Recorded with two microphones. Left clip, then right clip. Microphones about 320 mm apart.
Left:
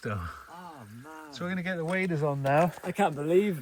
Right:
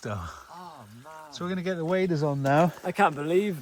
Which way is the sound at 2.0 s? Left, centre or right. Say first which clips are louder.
Right 2 dB; right.